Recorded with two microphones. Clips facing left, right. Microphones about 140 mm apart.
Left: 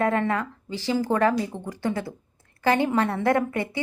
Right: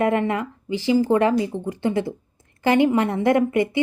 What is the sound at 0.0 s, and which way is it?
A woman's voice, 15° right (ahead or behind).